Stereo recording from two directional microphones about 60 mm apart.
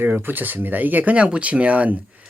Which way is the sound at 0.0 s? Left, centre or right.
Right.